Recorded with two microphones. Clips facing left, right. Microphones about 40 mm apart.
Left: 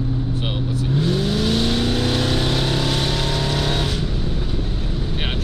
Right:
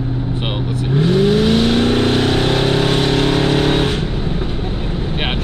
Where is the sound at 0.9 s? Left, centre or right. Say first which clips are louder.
Right 8 dB; right.